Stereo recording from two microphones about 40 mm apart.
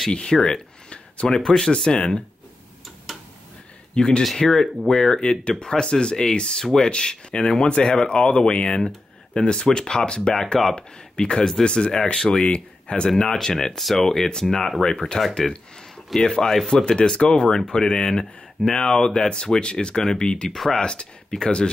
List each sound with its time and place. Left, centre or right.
0.2 s speech: centre
1.2 s speech: centre
3.1 s tick-tock: centre
3.9 s speech: left
4.4 s speech: centre
5.1 s speech: left
10.3 s speech: centre
11.9 s speech: centre
13.1 s speech: centre
13.7 s speech: centre
16.3 s speech: centre
20.4 s speech: centre
20.8 s speech: left